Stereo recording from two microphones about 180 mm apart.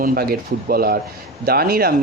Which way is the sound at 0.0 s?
55° right (ahead or behind).